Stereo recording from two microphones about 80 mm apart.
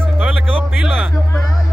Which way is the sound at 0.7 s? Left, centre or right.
Centre.